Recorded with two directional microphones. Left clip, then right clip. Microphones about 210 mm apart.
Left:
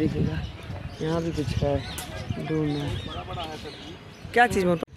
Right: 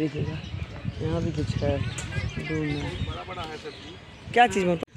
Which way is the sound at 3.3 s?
35° left (ahead or behind).